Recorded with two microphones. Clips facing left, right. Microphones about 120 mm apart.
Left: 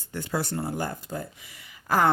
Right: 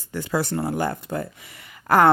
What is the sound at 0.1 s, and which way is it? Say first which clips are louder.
Speech: right 5 dB; 90° right.